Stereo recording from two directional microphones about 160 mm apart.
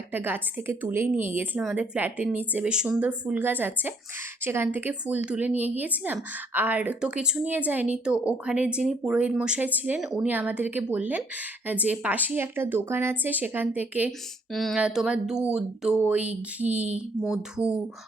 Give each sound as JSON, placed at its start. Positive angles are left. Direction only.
{"t": 0.1, "sound": "speech", "side_deg": -10}
{"t": 14.5, "sound": "speech", "side_deg": 0}